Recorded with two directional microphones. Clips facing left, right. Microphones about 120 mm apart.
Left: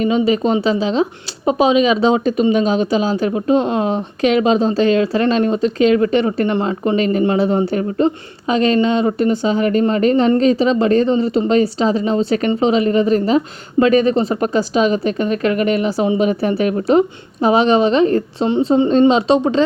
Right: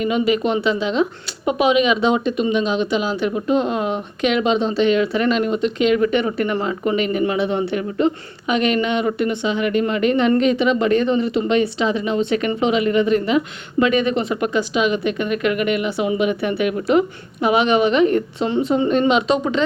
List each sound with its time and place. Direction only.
0.0 s speech: 30° left (ahead or behind)